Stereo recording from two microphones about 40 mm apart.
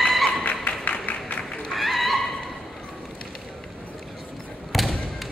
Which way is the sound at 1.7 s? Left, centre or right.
Centre.